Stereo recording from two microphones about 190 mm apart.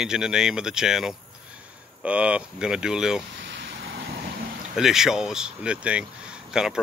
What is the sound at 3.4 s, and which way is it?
Vehicle, 65° right (ahead or behind).